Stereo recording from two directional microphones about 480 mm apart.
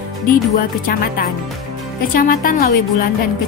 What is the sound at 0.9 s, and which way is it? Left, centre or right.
A woman's voice, centre.